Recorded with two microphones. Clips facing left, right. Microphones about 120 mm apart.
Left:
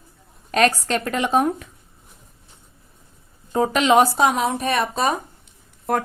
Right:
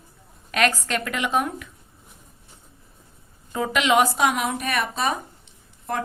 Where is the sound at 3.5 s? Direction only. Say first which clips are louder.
Left 4 dB; 35° left (ahead or behind).